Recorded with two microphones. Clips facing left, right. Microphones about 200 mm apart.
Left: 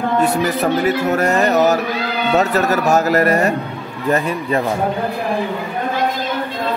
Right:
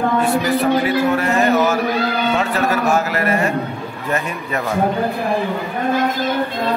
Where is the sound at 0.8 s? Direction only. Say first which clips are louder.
Left 1 dB; 40° left (ahead or behind).